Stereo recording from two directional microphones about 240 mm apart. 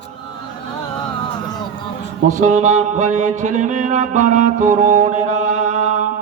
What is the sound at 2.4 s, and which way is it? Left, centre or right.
Music, right.